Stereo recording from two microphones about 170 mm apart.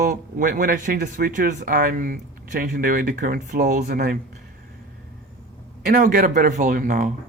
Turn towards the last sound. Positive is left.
turn(degrees=-50)  # may be behind; listen again after turning